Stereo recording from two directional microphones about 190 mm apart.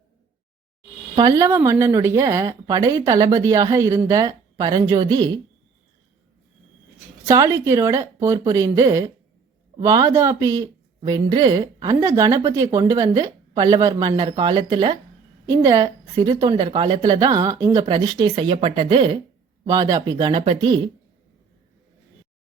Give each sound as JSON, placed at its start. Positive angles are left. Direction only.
{"t": 1.1, "sound": "speech", "side_deg": -20}
{"t": 7.3, "sound": "speech", "side_deg": -15}